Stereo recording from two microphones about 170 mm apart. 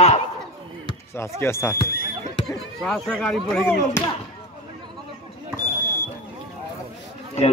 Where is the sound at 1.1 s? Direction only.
15° left (ahead or behind).